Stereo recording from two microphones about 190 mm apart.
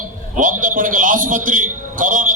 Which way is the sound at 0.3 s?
45° right (ahead or behind).